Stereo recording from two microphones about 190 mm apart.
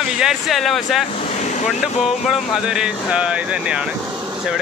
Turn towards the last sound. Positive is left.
turn(degrees=-5)  # may be behind; listen again after turning